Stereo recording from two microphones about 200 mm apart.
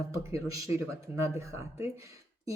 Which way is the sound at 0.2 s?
15° right (ahead or behind).